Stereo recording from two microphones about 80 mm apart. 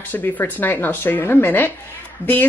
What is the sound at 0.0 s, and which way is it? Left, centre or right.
Speech, left.